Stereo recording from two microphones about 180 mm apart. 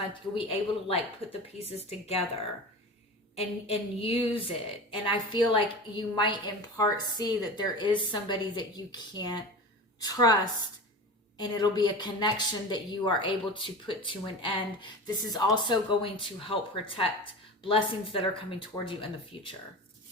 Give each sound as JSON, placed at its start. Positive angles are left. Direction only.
{"t": 0.1, "sound": "a woman's voice", "side_deg": 30}
{"t": 11.3, "sound": "a woman's voice", "side_deg": 25}